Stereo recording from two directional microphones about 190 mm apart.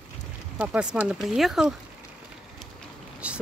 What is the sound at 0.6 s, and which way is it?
Speech, 5° right (ahead or behind).